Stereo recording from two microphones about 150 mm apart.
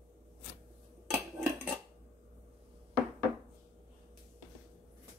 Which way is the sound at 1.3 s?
15° right (ahead or behind).